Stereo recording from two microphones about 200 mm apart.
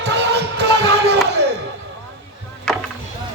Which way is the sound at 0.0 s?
55° right (ahead or behind).